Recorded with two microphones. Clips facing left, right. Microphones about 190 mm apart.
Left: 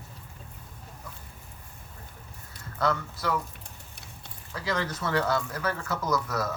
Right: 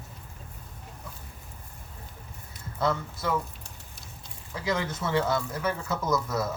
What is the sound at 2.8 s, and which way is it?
Speech, 25° right (ahead or behind).